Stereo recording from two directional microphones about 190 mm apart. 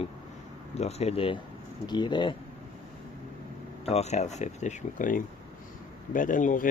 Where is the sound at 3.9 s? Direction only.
35° left (ahead or behind).